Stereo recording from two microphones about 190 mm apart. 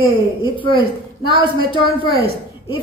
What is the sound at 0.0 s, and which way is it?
A woman's voice, 25° left (ahead or behind).